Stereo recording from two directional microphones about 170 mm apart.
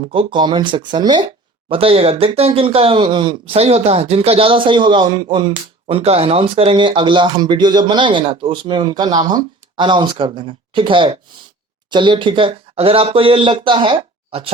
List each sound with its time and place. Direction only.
0.1 s speech: 30° right (ahead or behind)